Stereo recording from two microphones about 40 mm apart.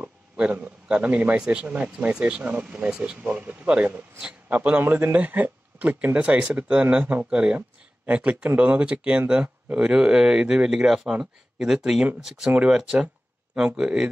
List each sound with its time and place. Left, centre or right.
0.4 s a man's voice: right
1.4 s speech: right
1.7 s a man's voice: right
4.8 s a man's voice: right
5.1 s a man's voice: right
7.2 s speech: right
8.1 s a man's voice: right; by 12.4 s centre
12.4 s speech: right